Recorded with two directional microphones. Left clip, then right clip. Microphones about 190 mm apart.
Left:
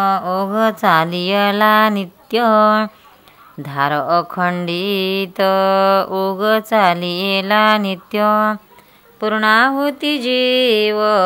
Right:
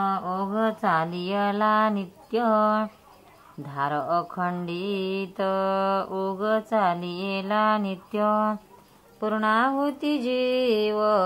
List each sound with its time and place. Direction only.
0.0 s speech: 35° left (ahead or behind)
9.2 s mantra: 25° left (ahead or behind)